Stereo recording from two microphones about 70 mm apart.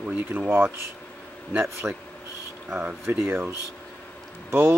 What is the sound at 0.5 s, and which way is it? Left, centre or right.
Speech, right.